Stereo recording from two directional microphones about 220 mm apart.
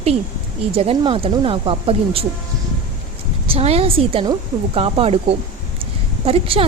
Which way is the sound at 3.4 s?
25° right (ahead or behind).